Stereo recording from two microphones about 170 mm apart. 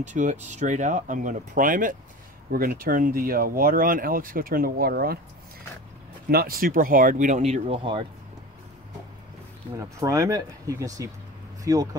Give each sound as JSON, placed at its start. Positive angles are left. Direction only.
{"t": 0.0, "sound": "speech", "side_deg": -45}
{"t": 6.2, "sound": "speech", "side_deg": -60}
{"t": 9.8, "sound": "speech", "side_deg": -20}